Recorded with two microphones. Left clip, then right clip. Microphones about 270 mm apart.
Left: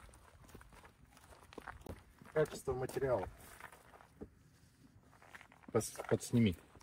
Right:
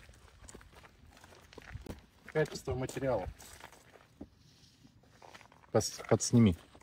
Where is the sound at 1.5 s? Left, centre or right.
Left.